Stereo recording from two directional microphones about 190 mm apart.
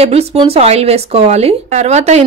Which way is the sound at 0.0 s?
35° right (ahead or behind).